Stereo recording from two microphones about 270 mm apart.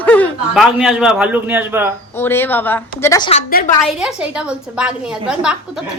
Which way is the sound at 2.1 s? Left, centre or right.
Centre.